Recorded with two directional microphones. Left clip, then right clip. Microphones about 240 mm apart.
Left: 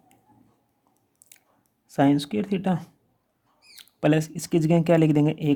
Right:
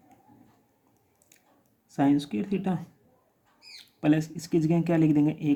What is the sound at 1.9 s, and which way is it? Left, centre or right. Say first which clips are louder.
Speech: left 4 dB; left.